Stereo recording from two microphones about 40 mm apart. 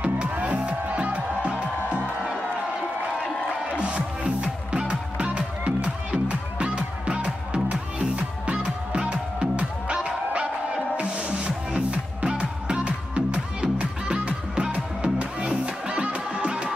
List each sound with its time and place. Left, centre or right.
0.0 s music: right
3.8 s music: right